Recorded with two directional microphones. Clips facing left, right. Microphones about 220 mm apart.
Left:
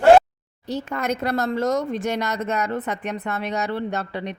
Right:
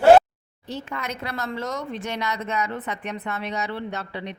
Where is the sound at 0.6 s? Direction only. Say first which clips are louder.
Left 7 dB; 45° left (ahead or behind).